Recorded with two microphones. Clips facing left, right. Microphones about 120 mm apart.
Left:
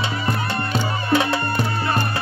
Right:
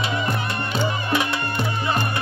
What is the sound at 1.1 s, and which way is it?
Music, 30° left (ahead or behind).